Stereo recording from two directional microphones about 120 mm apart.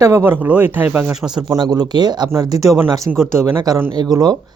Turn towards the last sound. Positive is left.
turn(degrees=-30)  # may be behind; listen again after turning